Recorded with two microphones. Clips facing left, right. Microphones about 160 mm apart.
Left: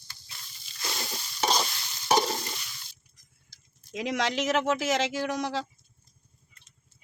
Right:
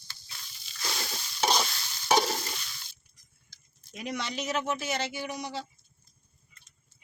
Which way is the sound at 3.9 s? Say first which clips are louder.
Left 6 dB; 90° left.